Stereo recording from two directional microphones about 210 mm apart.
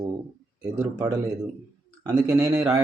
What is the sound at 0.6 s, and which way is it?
Speech, 15° right (ahead or behind).